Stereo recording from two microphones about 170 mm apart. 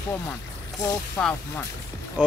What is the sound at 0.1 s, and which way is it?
Speech, 20° left (ahead or behind).